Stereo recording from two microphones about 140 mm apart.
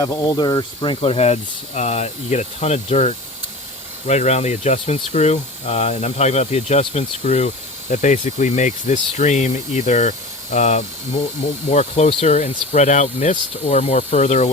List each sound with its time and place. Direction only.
0.0 s speech: 25° left (ahead or behind); by 14.5 s 55° left (ahead or behind)